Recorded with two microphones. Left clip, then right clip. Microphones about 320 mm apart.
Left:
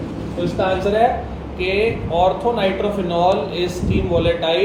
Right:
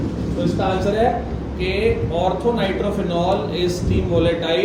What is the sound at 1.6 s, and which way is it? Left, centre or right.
A man's voice, centre.